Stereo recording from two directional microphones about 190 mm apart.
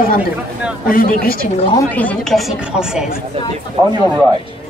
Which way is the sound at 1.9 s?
10° left (ahead or behind).